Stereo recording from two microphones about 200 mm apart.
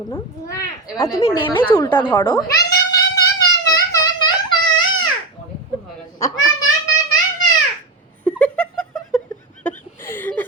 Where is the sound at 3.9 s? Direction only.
20° left (ahead or behind).